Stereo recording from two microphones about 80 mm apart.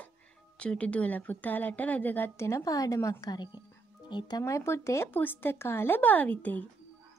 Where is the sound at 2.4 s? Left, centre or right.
Left.